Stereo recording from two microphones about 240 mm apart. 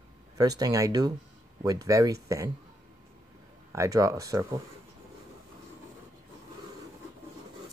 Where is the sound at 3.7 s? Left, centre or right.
Centre.